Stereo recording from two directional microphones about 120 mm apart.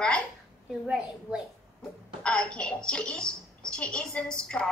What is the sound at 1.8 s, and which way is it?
A woman's voice, 10° left (ahead or behind).